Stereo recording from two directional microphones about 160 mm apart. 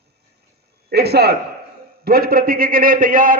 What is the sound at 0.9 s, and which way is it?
Speech, 85° right.